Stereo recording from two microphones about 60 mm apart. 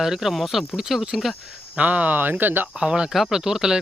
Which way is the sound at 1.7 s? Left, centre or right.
Right.